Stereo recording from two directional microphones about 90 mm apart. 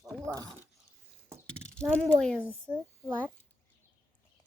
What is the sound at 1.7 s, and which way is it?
Speech, 10° left (ahead or behind).